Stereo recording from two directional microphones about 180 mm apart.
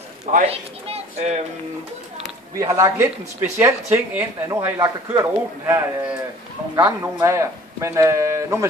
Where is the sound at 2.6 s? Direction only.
20° right (ahead or behind).